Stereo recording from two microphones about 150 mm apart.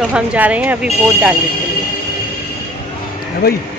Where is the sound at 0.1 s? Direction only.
10° right (ahead or behind).